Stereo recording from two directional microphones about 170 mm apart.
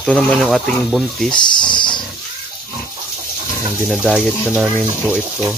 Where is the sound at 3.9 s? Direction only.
5° right (ahead or behind).